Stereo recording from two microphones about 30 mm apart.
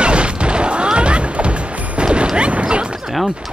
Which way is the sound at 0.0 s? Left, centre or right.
Right.